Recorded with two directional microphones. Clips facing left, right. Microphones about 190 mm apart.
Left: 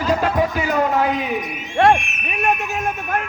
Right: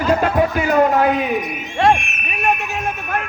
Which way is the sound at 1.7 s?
55° left (ahead or behind).